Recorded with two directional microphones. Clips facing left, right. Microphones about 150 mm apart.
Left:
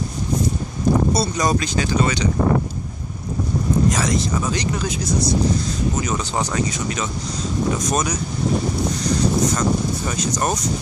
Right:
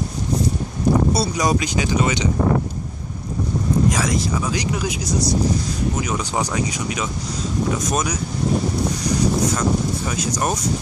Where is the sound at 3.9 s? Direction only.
5° right (ahead or behind).